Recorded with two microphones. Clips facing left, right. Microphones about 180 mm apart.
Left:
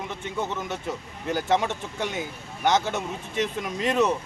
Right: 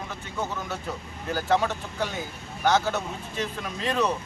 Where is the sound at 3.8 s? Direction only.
20° left (ahead or behind).